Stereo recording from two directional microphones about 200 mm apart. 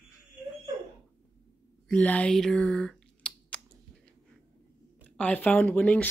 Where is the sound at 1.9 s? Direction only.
5° left (ahead or behind).